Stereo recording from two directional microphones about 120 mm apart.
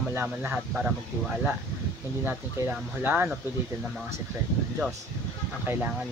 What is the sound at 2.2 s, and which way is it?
Speech, 15° right (ahead or behind).